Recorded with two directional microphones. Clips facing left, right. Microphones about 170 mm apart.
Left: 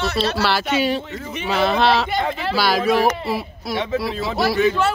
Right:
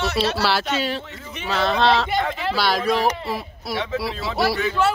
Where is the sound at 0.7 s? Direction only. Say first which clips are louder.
Left 4 dB; 15° left (ahead or behind).